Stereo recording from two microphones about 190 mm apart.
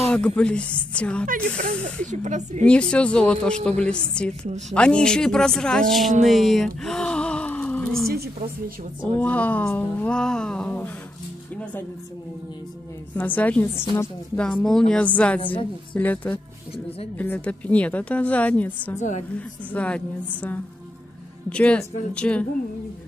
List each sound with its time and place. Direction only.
0.0 s speech: 5° left (ahead or behind)
1.2 s speech: 45° right (ahead or behind)
2.6 s speech: 5° left (ahead or behind)
6.2 s a sound: centre (ahead or behind)
8.1 s a sound: 50° right (ahead or behind)
9.2 s a woman's voice: 10° left (ahead or behind)
13.1 s a woman's voice: 10° left (ahead or behind)
18.9 s a woman's voice: 40° left (ahead or behind)
19.3 s a woman's voice: 5° left (ahead or behind)